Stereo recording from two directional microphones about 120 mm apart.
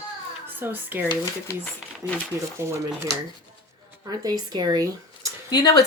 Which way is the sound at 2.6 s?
25° right (ahead or behind).